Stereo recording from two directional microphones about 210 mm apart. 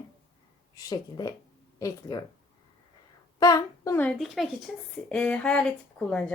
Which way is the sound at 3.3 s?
20° left (ahead or behind).